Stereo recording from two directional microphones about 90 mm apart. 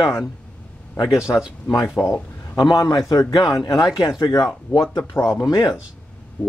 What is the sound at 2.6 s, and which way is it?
Speech, 45° left (ahead or behind).